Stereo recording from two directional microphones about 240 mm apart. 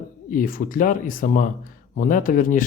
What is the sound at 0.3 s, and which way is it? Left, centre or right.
Speech, left.